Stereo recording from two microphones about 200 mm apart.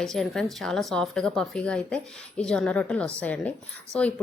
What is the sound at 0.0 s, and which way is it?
Speech, centre (ahead or behind).